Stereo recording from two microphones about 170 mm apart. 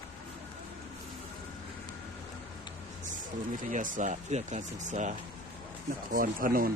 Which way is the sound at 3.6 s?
50° right (ahead or behind).